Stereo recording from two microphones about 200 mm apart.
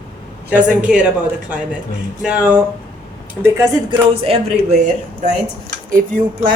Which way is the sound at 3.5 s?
25° right (ahead or behind).